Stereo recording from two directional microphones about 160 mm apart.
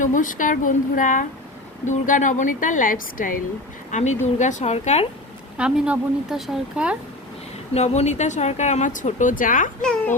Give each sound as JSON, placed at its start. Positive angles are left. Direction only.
{"t": 0.0, "sound": "a woman's voice", "side_deg": 55}
{"t": 3.9, "sound": "speech", "side_deg": 50}
{"t": 5.5, "sound": "speech", "side_deg": -5}
{"t": 7.7, "sound": "speech", "side_deg": 45}
{"t": 9.8, "sound": "a child's voice", "side_deg": 5}